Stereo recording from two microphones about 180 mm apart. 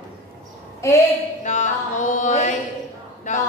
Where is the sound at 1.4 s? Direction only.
40° left (ahead or behind).